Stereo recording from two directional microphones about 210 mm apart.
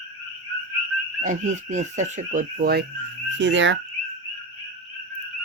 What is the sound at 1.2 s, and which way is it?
Speech, 35° right (ahead or behind).